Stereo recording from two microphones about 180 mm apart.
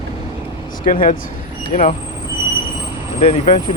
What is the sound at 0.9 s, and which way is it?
Speech, 50° left (ahead or behind).